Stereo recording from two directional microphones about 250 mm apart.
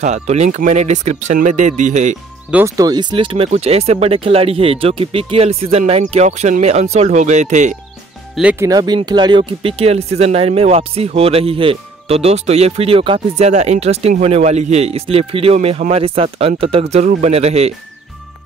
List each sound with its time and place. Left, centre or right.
0.0 s speech: right
2.5 s speech: centre; by 7.7 s right
8.4 s speech: centre; by 17.7 s right